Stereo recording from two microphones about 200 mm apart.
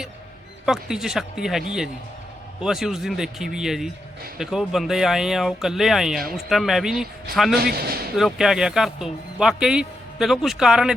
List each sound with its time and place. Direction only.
0.6 s speech: 5° right (ahead or behind)
7.6 s speech: 50° right (ahead or behind)
8.1 s speech: centre (ahead or behind)